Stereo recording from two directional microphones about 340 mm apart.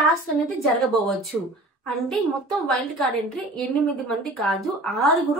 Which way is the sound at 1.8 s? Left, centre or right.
Centre.